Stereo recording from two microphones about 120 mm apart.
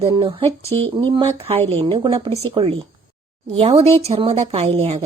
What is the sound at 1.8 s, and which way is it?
Speech, 40° right (ahead or behind).